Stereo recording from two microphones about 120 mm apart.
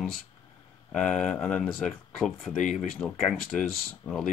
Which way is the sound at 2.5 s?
90° left.